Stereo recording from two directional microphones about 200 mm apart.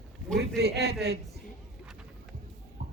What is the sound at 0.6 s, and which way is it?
Speech, 55° right (ahead or behind).